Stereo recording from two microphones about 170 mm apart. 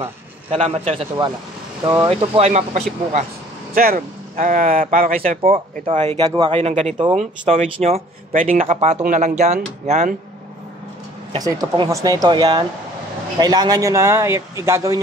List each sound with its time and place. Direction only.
0.0 s a man's voice: 40° right (ahead or behind)
2.0 s speech: 35° right (ahead or behind)
3.7 s speech: 60° right (ahead or behind)
5.4 s speech: 40° right (ahead or behind)
6.2 s speech: 25° right (ahead or behind)
6.6 s speech: 40° right (ahead or behind)
8.6 s speech: 35° right (ahead or behind)
11.3 s speech: 20° right (ahead or behind)